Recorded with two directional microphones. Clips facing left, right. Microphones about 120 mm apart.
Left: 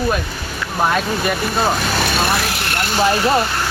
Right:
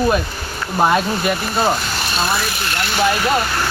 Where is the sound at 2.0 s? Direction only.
65° left (ahead or behind); by 2.7 s 85° left.